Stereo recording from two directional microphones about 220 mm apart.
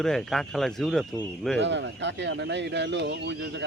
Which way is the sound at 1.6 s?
55° right (ahead or behind).